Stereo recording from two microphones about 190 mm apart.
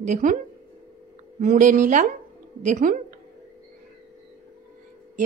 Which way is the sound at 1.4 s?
40° right (ahead or behind).